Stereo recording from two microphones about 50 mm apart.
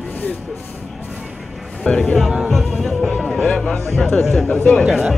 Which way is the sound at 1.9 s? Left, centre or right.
Centre.